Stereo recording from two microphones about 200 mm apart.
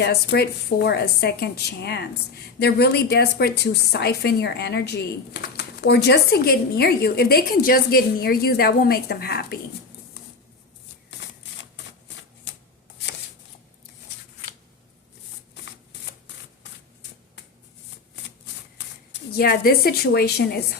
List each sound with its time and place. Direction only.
0.0 s a woman's voice: 55° left (ahead or behind)
15.6 s typewriter: 60° left (ahead or behind)
19.1 s a woman's voice: 50° left (ahead or behind)